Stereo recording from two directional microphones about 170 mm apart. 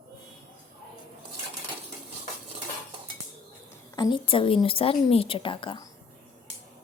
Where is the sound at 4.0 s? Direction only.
30° left (ahead or behind).